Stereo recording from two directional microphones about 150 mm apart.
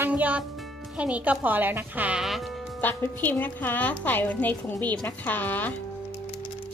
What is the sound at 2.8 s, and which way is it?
A woman's voice, 10° left (ahead or behind).